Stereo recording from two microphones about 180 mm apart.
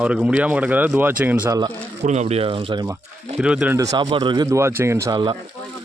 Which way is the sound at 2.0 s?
40° right (ahead or behind).